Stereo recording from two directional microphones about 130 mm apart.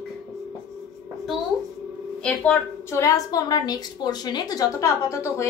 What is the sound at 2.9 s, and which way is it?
A woman's voice, 25° left (ahead or behind).